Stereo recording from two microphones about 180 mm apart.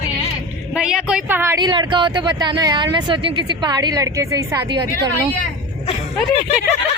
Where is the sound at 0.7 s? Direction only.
5° right (ahead or behind); by 5.1 s 20° right (ahead or behind).